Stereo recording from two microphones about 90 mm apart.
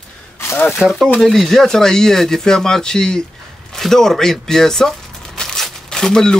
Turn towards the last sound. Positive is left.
turn(degrees=5)  # may be behind; listen again after turning